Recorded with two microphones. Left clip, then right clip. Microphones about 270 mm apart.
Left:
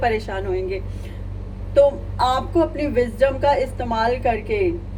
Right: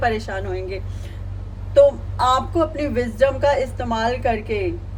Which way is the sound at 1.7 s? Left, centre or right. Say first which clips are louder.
Right 2 dB; right.